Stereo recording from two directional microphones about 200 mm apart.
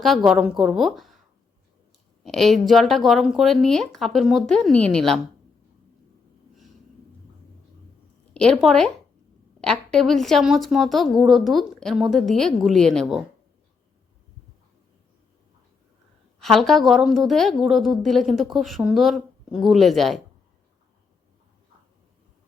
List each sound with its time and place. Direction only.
0.0 s speech: centre (ahead or behind)
2.2 s speech: centre (ahead or behind)
8.3 s a woman's voice: 5° left (ahead or behind)
16.4 s speech: centre (ahead or behind)